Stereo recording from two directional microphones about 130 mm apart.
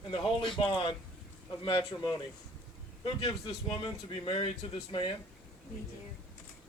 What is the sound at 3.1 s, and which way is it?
Speech, 40° left (ahead or behind).